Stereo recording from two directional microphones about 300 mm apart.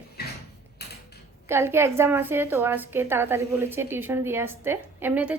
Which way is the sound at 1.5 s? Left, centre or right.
Centre.